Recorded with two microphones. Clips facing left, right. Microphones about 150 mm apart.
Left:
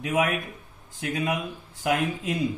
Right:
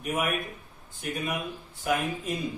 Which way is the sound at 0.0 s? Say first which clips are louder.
Left 4 dB; 90° left.